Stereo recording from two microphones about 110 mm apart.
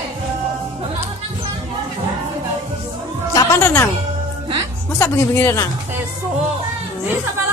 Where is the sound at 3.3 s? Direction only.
30° left (ahead or behind).